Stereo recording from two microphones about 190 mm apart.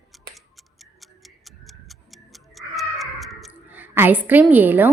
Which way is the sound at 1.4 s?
Centre (ahead or behind).